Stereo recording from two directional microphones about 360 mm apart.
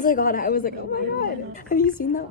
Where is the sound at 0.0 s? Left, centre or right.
Left.